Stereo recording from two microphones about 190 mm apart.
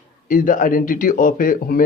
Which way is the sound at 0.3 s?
45° left (ahead or behind).